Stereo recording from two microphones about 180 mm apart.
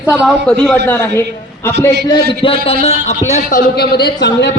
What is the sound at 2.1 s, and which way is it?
A man's voice, 30° left (ahead or behind).